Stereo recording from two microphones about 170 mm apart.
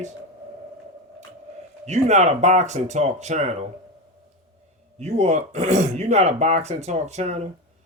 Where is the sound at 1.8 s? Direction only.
40° right (ahead or behind).